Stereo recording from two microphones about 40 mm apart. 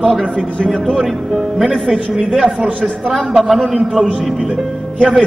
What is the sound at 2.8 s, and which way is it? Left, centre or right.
Speech, centre.